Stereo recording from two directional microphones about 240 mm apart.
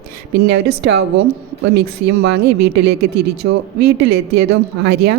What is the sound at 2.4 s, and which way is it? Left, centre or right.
Speech, right.